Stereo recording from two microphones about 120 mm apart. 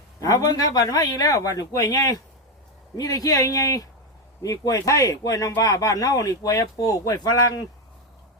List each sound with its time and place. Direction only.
0.2 s speech: 30° left (ahead or behind)